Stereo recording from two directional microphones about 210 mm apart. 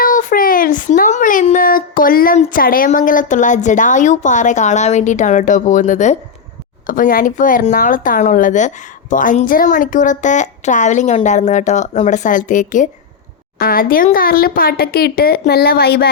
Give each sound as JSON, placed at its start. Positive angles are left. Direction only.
{"t": 0.0, "sound": "speech", "side_deg": 40}